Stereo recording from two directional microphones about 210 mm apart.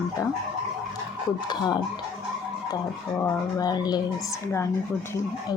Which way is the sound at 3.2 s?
15° left (ahead or behind).